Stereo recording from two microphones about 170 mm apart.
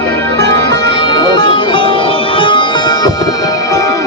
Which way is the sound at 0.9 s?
25° left (ahead or behind).